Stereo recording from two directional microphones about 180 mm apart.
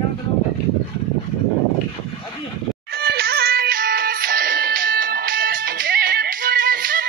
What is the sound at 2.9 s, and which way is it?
Music, 60° right (ahead or behind).